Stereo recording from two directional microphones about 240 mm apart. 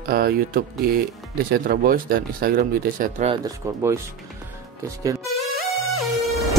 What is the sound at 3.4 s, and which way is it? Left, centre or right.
Speech, centre.